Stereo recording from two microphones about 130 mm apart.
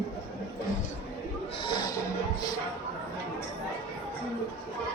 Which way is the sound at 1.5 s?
40° left (ahead or behind).